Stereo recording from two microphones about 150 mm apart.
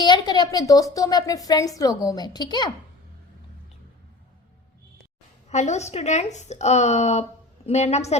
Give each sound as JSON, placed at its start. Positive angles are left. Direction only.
{"t": 0.0, "sound": "a sound", "side_deg": 30}
{"t": 0.9, "sound": "a woman's voice", "side_deg": 25}
{"t": 5.5, "sound": "a woman's voice", "side_deg": 50}